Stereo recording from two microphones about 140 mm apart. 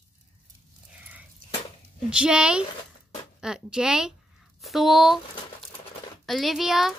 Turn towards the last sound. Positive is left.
turn(degrees=-5)  # may be behind; listen again after turning